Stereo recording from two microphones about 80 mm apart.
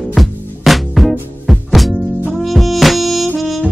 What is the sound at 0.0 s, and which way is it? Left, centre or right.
Music, centre.